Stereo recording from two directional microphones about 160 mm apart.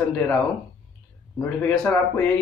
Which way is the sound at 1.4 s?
10° left (ahead or behind).